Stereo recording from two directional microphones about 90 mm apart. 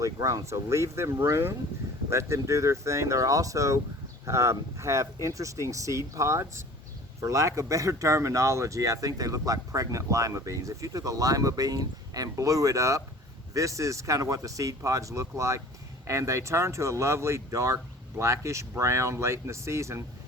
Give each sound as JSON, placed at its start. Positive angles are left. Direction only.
{"t": 0.0, "sound": "speech", "side_deg": -40}